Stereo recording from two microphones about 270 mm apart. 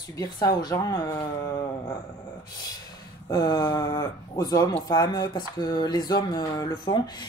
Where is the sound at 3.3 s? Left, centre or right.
Centre.